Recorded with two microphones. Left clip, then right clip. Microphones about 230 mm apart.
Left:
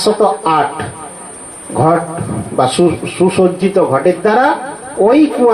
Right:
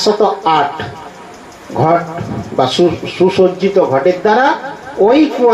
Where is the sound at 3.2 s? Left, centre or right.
Left.